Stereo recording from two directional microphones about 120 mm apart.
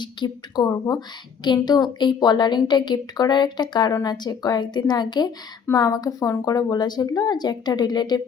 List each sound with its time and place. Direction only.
0.0 s a woman's voice: 40° left (ahead or behind)